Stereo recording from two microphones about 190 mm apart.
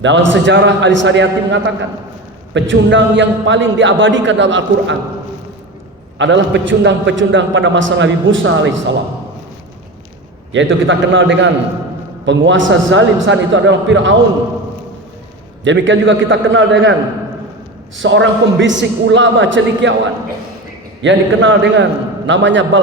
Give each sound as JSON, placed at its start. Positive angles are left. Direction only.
{"t": 0.0, "sound": "a man's voice", "side_deg": -70}
{"t": 6.1, "sound": "a man's voice", "side_deg": -70}
{"t": 10.5, "sound": "a man's voice", "side_deg": -75}
{"t": 15.6, "sound": "a man's voice", "side_deg": -75}
{"t": 17.9, "sound": "a man's voice", "side_deg": -75}
{"t": 21.0, "sound": "a man's voice", "side_deg": -80}